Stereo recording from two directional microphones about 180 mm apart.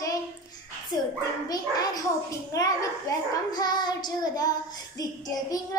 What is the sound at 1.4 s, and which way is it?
A child's voice, 20° left (ahead or behind).